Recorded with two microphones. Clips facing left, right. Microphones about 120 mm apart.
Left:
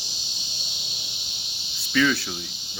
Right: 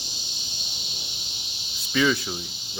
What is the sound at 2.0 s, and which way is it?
Cricket, 15° right (ahead or behind).